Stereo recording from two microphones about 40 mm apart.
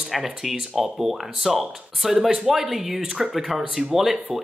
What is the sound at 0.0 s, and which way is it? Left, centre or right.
Speech, centre.